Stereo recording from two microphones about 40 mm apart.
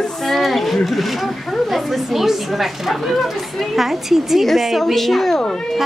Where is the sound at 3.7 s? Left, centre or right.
Centre.